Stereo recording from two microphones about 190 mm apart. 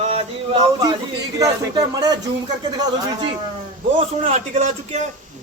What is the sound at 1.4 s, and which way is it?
Speech, 20° right (ahead or behind).